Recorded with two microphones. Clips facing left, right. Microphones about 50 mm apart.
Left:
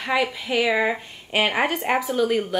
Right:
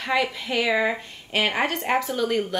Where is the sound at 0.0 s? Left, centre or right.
Centre.